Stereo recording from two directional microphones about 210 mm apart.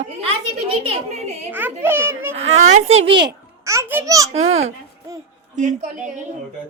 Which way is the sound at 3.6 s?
15° right (ahead or behind).